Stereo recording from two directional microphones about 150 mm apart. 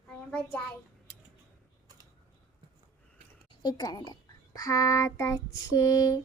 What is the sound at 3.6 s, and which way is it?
Child singing, 25° left (ahead or behind).